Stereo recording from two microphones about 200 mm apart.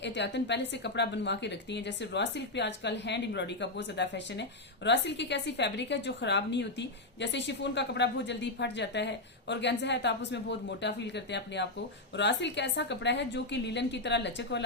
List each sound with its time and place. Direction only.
0.0 s a woman's voice: 60° left (ahead or behind)